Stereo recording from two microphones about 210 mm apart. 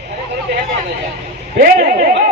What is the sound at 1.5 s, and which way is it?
Speech, 45° right (ahead or behind).